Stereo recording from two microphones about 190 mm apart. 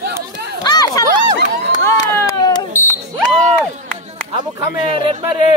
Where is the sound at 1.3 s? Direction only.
60° right (ahead or behind).